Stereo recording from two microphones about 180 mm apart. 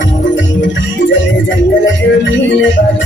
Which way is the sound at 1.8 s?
90° left.